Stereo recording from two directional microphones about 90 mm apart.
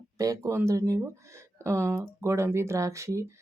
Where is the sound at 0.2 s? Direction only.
35° right (ahead or behind).